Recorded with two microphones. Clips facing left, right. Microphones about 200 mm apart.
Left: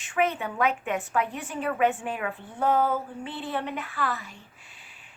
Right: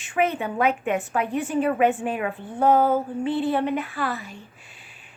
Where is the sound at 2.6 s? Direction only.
45° right (ahead or behind).